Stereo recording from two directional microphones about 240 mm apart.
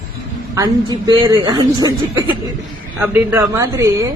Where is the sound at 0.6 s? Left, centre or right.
Centre.